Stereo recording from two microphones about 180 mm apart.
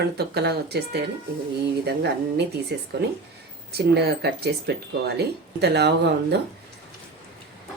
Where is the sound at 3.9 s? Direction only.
65° right (ahead or behind).